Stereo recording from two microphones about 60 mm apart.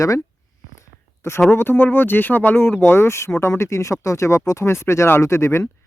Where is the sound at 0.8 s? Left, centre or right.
Left.